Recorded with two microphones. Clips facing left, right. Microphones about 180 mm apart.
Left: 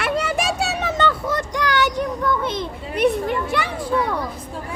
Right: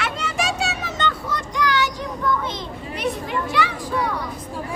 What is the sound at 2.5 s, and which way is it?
Children playing, 60° left (ahead or behind).